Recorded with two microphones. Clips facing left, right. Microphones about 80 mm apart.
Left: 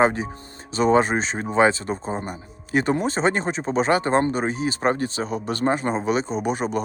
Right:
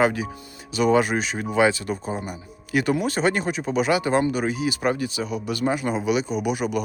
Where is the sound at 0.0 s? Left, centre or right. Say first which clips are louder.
Left 2 dB; left.